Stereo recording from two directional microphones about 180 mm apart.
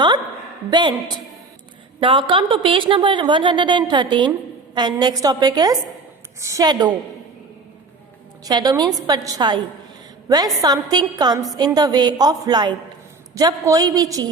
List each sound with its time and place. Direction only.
0.7 s a woman's voice: 25° right (ahead or behind)
8.4 s a woman's voice: 20° right (ahead or behind)